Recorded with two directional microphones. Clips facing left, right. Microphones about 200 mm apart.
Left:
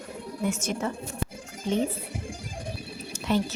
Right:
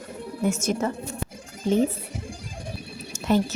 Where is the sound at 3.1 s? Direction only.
45° right (ahead or behind).